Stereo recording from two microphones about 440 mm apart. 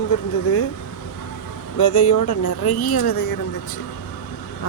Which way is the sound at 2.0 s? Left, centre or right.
Left.